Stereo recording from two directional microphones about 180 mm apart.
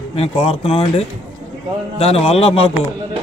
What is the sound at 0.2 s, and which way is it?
A man's voice, 35° left (ahead or behind).